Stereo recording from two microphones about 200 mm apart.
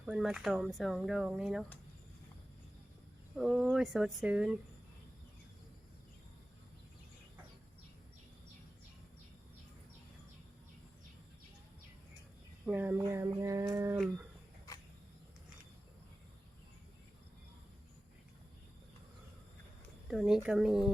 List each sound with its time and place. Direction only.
0.0 s speech: 5° right (ahead or behind)
3.3 s speech: 5° right (ahead or behind)
12.6 s a sound: 10° right (ahead or behind)
20.1 s speech: centre (ahead or behind)